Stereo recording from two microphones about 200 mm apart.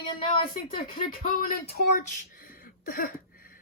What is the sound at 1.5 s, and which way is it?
Speech, 50° left (ahead or behind).